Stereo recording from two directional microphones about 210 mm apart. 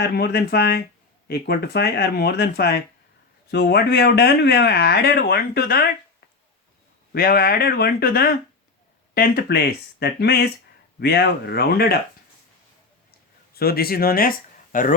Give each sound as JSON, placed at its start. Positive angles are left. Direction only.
{"t": 0.0, "sound": "speech", "side_deg": 50}
{"t": 13.5, "sound": "speech", "side_deg": 45}